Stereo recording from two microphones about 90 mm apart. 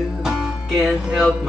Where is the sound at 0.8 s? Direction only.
5° right (ahead or behind).